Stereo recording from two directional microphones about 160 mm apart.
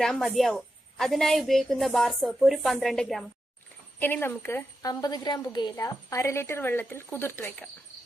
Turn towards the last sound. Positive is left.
turn(degrees=10)  # may be behind; listen again after turning